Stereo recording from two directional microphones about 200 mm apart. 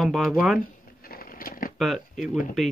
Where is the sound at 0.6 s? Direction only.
45° left (ahead or behind).